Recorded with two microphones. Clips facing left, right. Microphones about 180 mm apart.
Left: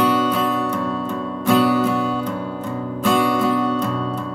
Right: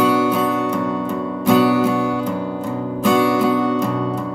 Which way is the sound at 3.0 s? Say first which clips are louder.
Right 2 dB; 5° right (ahead or behind).